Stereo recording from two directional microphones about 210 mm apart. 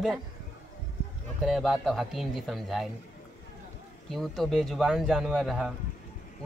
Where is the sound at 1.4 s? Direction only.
Centre (ahead or behind).